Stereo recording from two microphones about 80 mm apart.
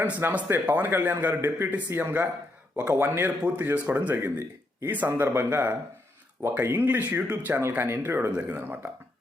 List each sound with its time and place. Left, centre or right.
0.0 s speech: right
8.3 s speech: centre
8.5 s speech: right